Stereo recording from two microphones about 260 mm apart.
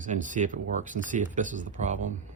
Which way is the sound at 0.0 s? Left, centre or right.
Right.